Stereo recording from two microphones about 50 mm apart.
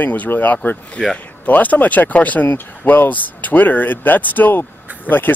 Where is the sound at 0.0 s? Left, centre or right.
Left.